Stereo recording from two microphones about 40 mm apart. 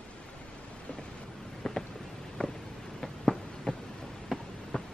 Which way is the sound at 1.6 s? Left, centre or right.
Centre.